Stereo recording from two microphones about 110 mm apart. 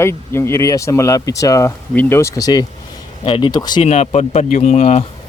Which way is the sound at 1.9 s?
20° left (ahead or behind).